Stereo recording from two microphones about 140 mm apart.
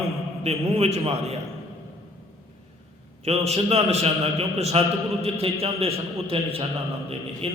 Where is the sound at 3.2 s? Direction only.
50° right (ahead or behind).